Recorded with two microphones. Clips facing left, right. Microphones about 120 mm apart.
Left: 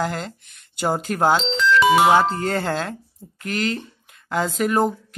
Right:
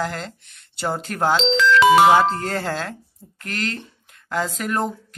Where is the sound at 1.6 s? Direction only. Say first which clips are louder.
Right 3 dB; 90° right.